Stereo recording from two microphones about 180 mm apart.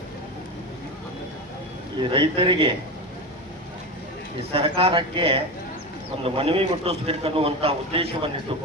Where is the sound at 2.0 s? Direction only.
30° right (ahead or behind).